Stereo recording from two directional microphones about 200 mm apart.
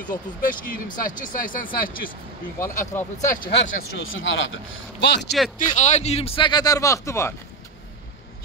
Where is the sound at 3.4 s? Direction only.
60° left (ahead or behind).